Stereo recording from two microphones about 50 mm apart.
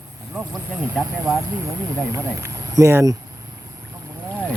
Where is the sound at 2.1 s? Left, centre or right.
Right.